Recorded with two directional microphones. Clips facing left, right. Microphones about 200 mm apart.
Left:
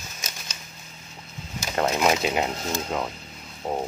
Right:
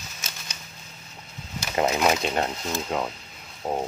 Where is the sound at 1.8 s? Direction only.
5° right (ahead or behind).